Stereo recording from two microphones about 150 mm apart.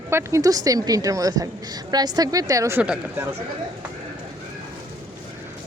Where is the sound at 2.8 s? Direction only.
5° right (ahead or behind).